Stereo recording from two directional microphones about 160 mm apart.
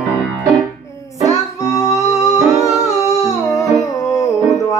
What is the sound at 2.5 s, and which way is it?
Humming, centre (ahead or behind).